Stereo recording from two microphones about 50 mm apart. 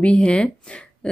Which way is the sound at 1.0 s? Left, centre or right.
Left.